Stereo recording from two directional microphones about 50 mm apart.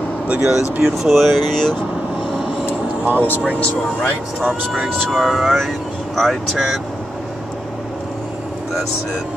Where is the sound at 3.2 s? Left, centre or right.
Left.